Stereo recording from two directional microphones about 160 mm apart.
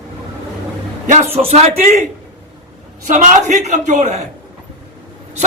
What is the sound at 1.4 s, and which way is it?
Speech, 40° right (ahead or behind).